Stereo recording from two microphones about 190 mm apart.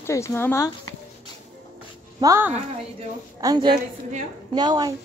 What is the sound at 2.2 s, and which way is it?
A woman's voice, 15° right (ahead or behind).